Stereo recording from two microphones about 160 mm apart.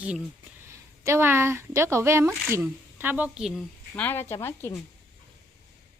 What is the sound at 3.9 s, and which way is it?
Speech, 10° left (ahead or behind).